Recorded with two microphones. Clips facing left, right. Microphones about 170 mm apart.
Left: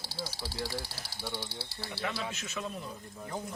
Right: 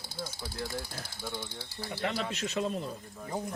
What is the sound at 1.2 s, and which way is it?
Speech, 5° left (ahead or behind).